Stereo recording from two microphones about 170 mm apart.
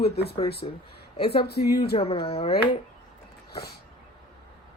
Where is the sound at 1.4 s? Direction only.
70° left (ahead or behind).